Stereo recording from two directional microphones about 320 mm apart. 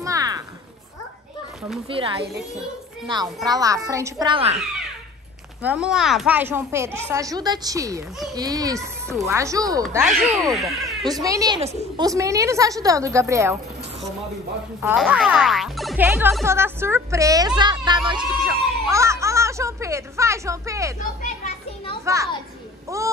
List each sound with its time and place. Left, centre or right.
0.0 s a sound: centre
1.9 s speech: centre
3.4 s speech: centre
5.6 s speech: centre
11.1 s speech: centre
14.8 s speech: centre
22.0 s a child's voice: centre